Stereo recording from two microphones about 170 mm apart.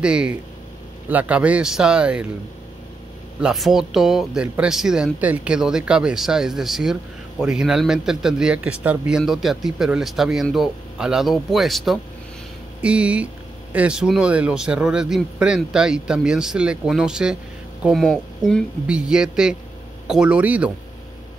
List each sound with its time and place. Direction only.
0.0 s a man's voice: 5° right (ahead or behind)
3.3 s a man's voice: centre (ahead or behind)